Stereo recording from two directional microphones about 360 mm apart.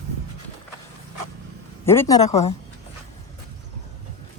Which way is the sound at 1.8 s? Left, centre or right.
Centre.